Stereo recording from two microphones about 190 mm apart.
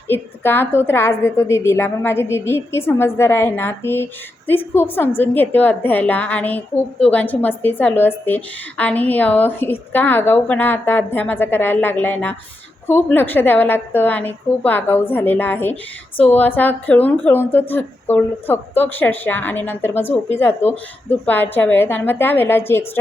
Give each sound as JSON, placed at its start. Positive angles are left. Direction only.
{"t": 0.1, "sound": "a woman's voice", "side_deg": 10}